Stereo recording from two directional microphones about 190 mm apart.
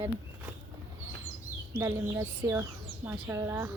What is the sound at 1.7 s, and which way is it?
A woman's voice, 15° right (ahead or behind).